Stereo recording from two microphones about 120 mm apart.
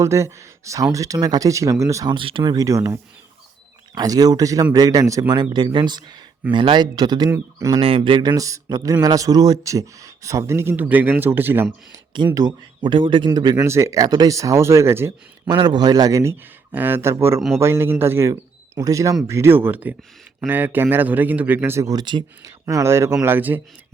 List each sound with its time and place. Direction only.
0.0 s a man's voice: 25° right (ahead or behind)
2.1 s speech: 45° right (ahead or behind)
2.6 s a man's voice: 25° right (ahead or behind)
7.8 s a man's voice: 50° right (ahead or behind); by 11.7 s 15° right (ahead or behind)
11.9 s speech: 35° right (ahead or behind)
13.7 s a man's voice: 25° right (ahead or behind)
15.4 s speech: 40° right (ahead or behind)
16.7 s a man's voice: 15° right (ahead or behind); by 22.5 s 35° right (ahead or behind)
22.6 s a man's voice: 20° right (ahead or behind)